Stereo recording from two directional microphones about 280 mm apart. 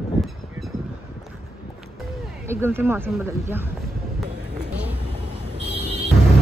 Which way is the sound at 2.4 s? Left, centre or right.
Centre.